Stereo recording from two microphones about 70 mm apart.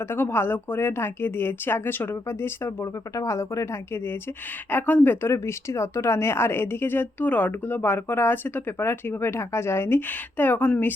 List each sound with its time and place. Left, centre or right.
0.0 s speech: left
2.8 s speech: left
5.3 s speech: left